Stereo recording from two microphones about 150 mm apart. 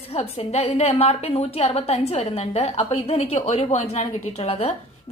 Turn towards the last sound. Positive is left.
turn(degrees=45)  # may be behind; listen again after turning